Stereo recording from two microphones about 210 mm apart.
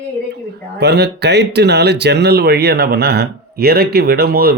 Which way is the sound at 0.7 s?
50° right (ahead or behind).